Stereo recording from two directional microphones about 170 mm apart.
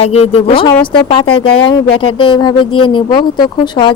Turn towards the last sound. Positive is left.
turn(degrees=30)  # may be behind; listen again after turning